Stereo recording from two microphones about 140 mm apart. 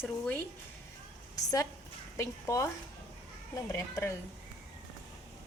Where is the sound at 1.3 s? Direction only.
25° left (ahead or behind).